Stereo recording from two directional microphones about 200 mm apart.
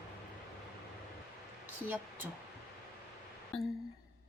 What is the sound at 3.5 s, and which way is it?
Speech, 5° left (ahead or behind).